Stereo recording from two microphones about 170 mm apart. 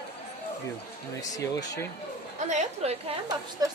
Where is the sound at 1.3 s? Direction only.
20° left (ahead or behind).